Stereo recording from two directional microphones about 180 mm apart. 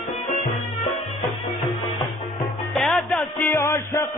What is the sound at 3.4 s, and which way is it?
Music, 15° left (ahead or behind).